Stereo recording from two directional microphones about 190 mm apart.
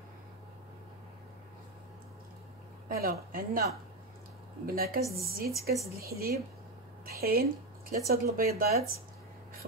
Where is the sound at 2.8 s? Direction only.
50° right (ahead or behind).